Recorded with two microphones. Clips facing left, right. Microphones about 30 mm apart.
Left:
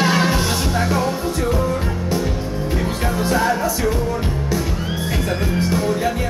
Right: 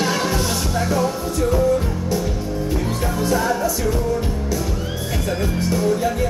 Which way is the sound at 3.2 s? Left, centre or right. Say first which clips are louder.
Left 1 dB; left.